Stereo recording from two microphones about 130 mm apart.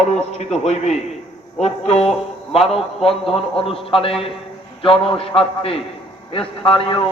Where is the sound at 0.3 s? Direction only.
60° left (ahead or behind).